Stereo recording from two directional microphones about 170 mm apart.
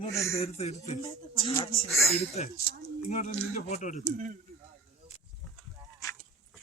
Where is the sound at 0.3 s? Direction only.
35° left (ahead or behind).